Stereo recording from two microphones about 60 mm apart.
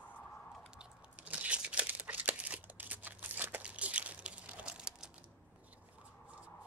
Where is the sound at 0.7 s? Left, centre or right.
Centre.